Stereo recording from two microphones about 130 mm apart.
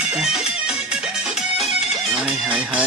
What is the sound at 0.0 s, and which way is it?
Music, 5° right (ahead or behind).